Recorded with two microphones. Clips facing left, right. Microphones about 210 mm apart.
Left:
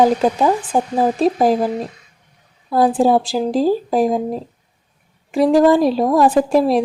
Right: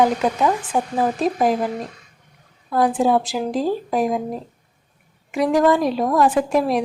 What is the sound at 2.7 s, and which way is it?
A woman's voice, 35° left (ahead or behind).